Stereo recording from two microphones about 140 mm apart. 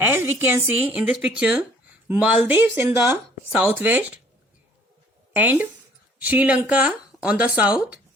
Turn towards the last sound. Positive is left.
turn(degrees=-10)  # may be behind; listen again after turning